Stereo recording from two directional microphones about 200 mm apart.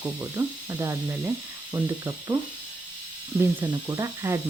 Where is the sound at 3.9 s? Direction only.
15° right (ahead or behind).